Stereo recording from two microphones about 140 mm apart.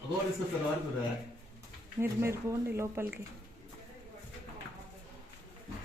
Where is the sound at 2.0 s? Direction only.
20° right (ahead or behind).